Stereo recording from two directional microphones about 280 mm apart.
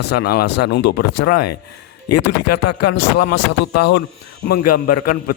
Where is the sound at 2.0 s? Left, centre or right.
Left.